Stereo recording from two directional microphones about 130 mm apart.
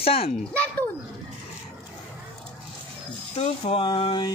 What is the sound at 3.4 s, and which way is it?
Speech, 45° left (ahead or behind).